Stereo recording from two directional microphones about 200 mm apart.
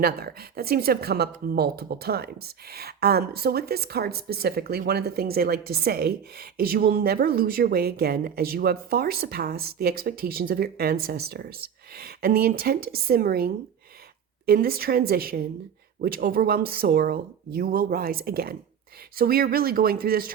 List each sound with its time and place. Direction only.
0.0 s speech: 50° right (ahead or behind)